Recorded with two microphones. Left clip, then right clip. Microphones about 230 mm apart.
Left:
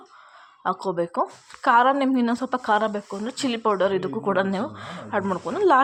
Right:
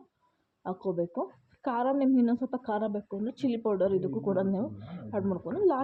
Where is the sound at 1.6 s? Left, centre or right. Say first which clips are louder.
Left 10 dB; centre.